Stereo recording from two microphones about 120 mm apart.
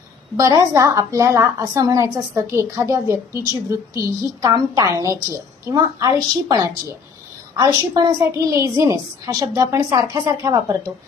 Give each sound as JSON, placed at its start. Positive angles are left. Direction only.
{"t": 0.3, "sound": "a woman's voice", "side_deg": -25}